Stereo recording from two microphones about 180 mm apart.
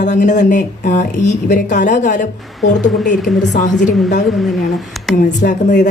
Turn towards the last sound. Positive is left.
turn(degrees=45)  # may be behind; listen again after turning